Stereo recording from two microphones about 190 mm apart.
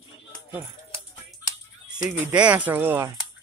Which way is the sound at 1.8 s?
10° right (ahead or behind).